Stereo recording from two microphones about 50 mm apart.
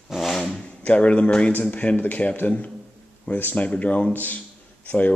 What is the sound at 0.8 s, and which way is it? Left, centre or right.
Speech, left.